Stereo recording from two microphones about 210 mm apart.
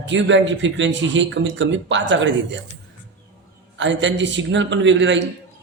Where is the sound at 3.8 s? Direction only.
60° right (ahead or behind).